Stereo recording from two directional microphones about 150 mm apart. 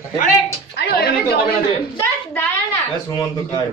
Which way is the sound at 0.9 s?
90° left.